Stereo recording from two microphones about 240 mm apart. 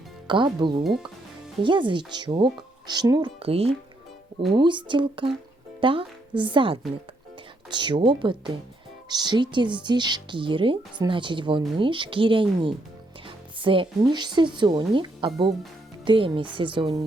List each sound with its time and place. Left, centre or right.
0.3 s a woman's voice: centre